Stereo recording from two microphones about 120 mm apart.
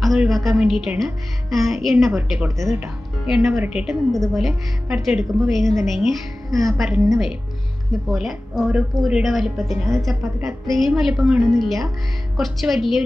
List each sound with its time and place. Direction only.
0.0 s a woman's voice: centre (ahead or behind)